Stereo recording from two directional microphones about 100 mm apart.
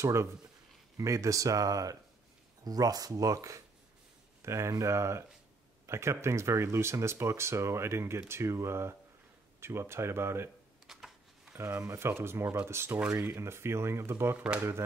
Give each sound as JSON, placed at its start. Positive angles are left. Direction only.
{"t": 0.0, "sound": "speech", "side_deg": -30}
{"t": 10.9, "sound": "a sound", "side_deg": -5}
{"t": 11.5, "sound": "speech", "side_deg": -25}